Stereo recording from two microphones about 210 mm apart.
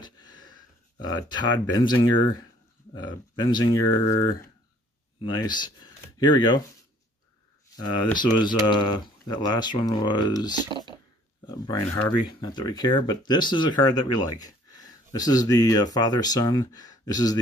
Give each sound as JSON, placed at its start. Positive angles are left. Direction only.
{"t": 0.0, "sound": "a sound", "side_deg": 20}
{"t": 1.0, "sound": "speech", "side_deg": 20}
{"t": 5.4, "sound": "speech", "side_deg": 20}
{"t": 7.7, "sound": "speech", "side_deg": 20}
{"t": 10.7, "sound": "speech", "side_deg": -25}
{"t": 11.4, "sound": "speech", "side_deg": 20}